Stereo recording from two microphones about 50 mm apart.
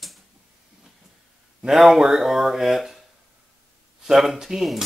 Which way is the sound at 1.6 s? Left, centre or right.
Centre.